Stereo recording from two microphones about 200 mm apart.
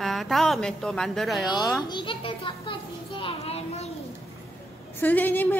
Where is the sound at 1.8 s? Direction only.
25° left (ahead or behind).